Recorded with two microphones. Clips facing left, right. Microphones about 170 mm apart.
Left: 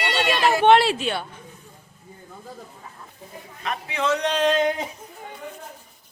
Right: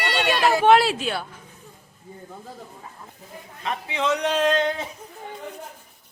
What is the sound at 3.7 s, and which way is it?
Speech, 25° right (ahead or behind).